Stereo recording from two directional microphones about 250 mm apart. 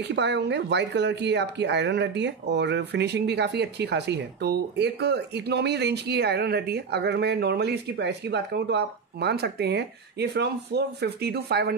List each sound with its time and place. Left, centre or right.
0.0 s speech: right